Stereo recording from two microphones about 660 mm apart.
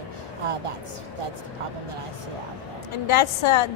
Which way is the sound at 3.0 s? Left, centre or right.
Left.